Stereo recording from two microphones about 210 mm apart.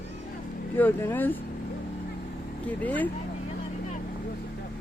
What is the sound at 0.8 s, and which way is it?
Speech, 10° left (ahead or behind).